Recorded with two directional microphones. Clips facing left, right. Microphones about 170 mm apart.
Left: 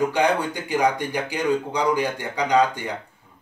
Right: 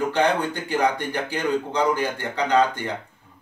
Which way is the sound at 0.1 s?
10° left (ahead or behind).